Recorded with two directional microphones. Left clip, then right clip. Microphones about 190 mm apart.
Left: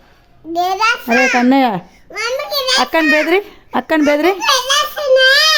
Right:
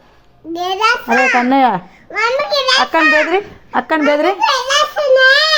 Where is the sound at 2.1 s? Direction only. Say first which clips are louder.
Right 5 dB; 5° left (ahead or behind).